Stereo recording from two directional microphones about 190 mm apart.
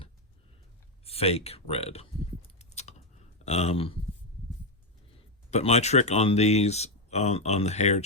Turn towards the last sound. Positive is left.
turn(degrees=35)  # may be behind; listen again after turning